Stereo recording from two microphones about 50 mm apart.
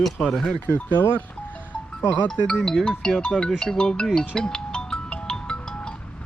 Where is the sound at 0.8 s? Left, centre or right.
Left.